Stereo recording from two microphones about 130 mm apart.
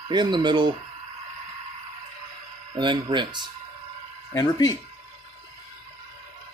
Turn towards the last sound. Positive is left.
turn(degrees=30)  # may be behind; listen again after turning